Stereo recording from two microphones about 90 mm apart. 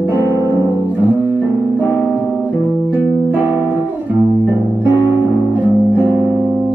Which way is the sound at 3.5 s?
20° right (ahead or behind).